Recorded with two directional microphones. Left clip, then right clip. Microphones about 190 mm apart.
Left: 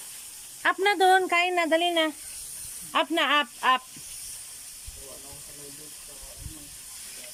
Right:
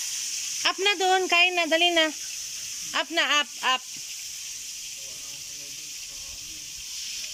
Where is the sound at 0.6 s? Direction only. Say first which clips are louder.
Left 2 dB; centre (ahead or behind).